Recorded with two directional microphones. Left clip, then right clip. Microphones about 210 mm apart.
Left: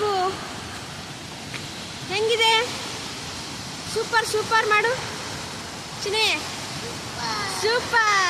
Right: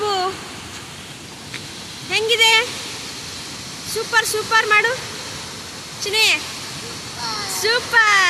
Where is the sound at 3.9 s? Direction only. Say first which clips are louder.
Right 3 dB; centre (ahead or behind).